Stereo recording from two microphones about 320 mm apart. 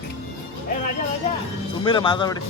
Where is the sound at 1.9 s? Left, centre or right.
Centre.